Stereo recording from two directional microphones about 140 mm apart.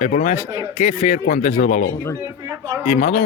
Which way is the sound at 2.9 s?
80° left.